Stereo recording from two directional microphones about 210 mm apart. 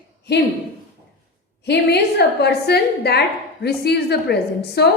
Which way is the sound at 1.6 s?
55° left (ahead or behind).